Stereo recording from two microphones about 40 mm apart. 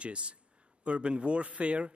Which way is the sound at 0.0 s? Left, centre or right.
Right.